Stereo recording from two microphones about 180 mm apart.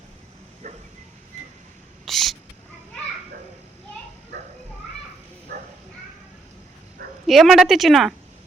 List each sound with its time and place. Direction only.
0.6 s bow-wow: 40° right (ahead or behind)
2.0 s owl: centre (ahead or behind)
5.5 s bow-wow: 60° right (ahead or behind)
7.3 s a woman's voice: centre (ahead or behind)